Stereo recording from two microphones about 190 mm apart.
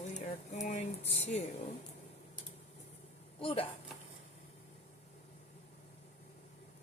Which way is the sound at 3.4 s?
30° left (ahead or behind).